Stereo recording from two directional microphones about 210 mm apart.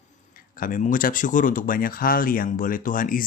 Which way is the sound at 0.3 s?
40° left (ahead or behind).